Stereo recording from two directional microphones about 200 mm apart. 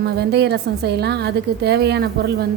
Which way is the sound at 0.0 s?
55° right (ahead or behind).